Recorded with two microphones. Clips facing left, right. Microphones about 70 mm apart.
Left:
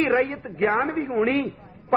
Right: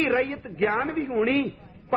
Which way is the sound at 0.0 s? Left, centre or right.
Left.